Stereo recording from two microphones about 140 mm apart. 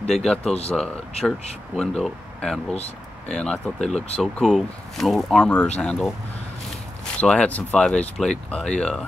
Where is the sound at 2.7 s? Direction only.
50° left (ahead or behind).